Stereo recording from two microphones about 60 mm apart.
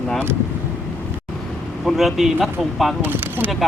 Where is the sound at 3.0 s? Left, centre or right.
Right.